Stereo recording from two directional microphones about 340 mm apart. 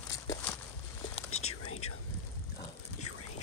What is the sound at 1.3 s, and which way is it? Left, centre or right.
Whispering, left.